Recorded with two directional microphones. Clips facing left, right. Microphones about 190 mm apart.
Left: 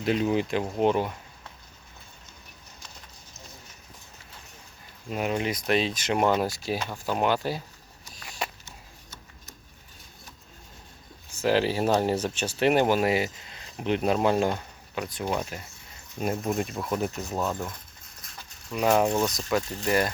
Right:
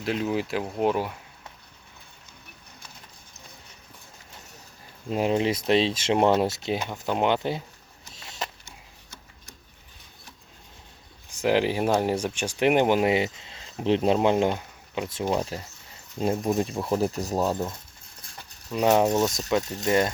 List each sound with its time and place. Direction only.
0.0 s speech: centre (ahead or behind)
5.0 s speech: 25° right (ahead or behind)
8.1 s a sound: 25° right (ahead or behind)
11.3 s speech: 15° right (ahead or behind)
16.8 s speech: 30° right (ahead or behind)
18.2 s a sound: 25° right (ahead or behind)
19.7 s speech: 25° right (ahead or behind)